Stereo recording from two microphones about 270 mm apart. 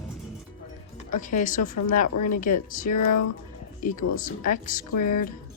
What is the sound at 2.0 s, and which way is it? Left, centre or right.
Speech, left.